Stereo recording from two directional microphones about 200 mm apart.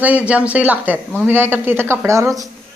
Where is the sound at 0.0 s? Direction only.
5° right (ahead or behind).